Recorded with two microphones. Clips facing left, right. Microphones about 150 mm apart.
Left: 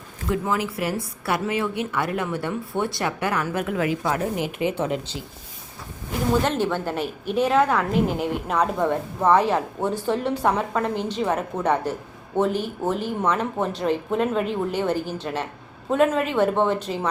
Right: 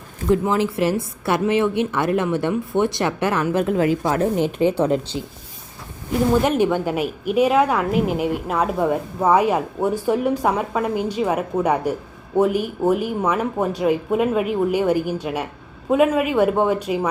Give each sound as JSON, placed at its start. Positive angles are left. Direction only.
{"t": 0.3, "sound": "a woman's voice", "side_deg": -30}
{"t": 6.4, "sound": "a woman's voice", "side_deg": -15}